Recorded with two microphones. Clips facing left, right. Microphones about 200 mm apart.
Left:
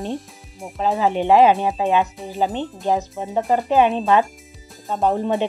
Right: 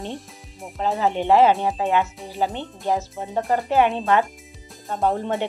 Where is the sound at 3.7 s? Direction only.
15° left (ahead or behind).